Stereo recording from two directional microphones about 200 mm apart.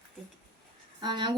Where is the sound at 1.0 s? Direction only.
25° right (ahead or behind).